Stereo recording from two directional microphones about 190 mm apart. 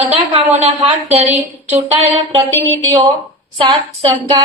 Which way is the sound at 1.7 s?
30° right (ahead or behind).